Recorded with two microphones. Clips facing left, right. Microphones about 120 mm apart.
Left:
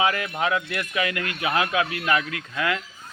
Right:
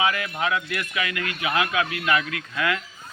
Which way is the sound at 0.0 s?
35° left (ahead or behind).